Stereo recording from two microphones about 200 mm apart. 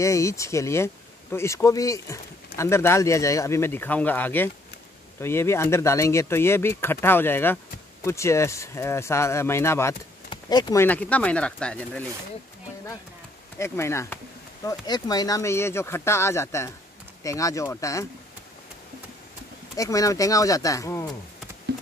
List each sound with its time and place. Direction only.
0.0 s speech: 15° left (ahead or behind)
13.6 s speech: 15° left (ahead or behind)
19.7 s speech: 15° left (ahead or behind)